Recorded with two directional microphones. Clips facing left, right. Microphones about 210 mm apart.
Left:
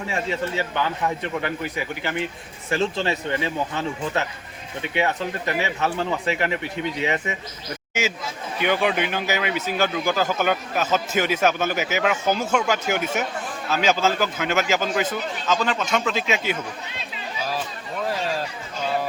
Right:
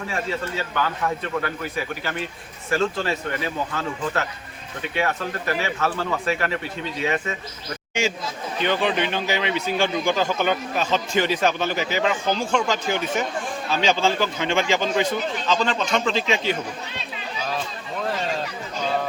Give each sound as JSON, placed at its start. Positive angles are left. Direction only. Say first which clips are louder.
{"t": 0.1, "sound": "speech", "louder": "left 2 dB", "side_deg": 20}
{"t": 8.5, "sound": "speech", "louder": "left 1 dB", "side_deg": 10}